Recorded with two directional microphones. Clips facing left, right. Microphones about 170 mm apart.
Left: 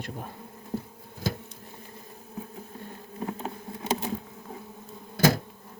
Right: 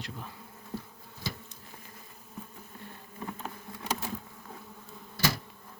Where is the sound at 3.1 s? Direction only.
35° left (ahead or behind).